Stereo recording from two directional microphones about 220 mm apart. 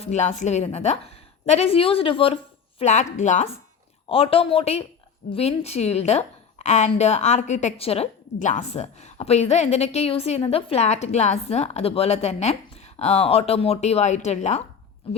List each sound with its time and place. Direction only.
0.0 s a woman's voice: 30° left (ahead or behind)